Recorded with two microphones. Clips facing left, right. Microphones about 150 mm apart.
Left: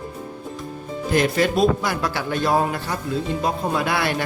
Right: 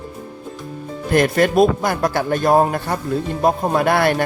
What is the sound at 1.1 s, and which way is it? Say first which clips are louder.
A man's voice: right 4 dB; 55° right (ahead or behind).